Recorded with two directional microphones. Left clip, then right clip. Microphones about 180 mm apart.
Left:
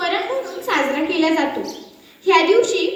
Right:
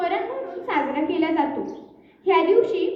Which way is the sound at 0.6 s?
20° right (ahead or behind).